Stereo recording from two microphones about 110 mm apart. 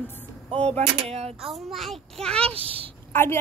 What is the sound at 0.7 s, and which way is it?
Speech, 70° right (ahead or behind).